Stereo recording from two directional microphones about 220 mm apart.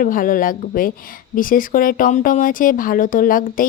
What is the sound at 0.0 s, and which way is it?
Speech, 40° left (ahead or behind).